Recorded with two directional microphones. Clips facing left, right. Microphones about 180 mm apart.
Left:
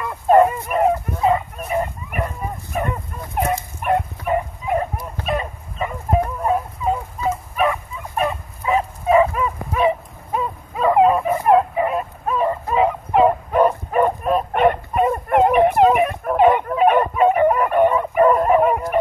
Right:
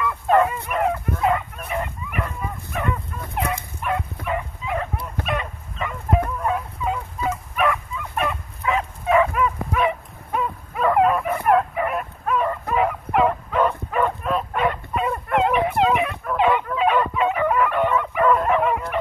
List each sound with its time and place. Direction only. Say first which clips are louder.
0.0 s fowl: left 5 dB; 40° left (ahead or behind)
2.2 s dog: left 3 dB; 35° left (ahead or behind)
3.3 s dog: left 5 dB; 50° left (ahead or behind)
5.2 s fowl: left 4 dB; 35° left (ahead or behind)
7.2 s dog: left 3 dB; 30° left (ahead or behind)
13.5 s dog: left 5 dB; 40° left (ahead or behind)